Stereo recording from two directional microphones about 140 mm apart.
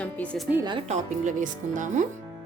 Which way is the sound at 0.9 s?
65° right (ahead or behind).